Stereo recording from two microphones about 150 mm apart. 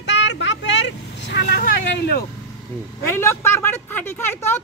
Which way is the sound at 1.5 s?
90° left.